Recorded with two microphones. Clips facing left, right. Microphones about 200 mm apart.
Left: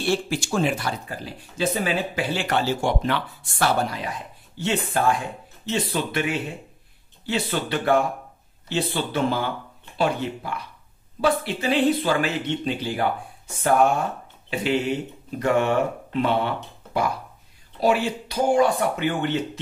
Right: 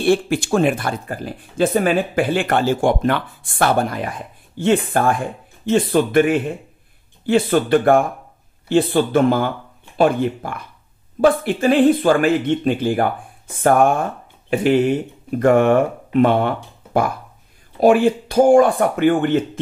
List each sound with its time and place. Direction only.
0.0 s speech: 55° right (ahead or behind)
17.7 s speech: 50° right (ahead or behind)